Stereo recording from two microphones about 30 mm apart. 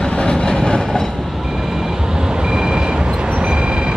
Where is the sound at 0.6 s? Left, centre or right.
Left.